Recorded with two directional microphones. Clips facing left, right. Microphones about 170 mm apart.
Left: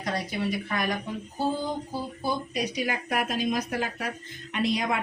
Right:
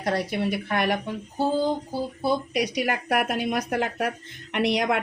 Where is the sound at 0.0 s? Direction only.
65° right (ahead or behind).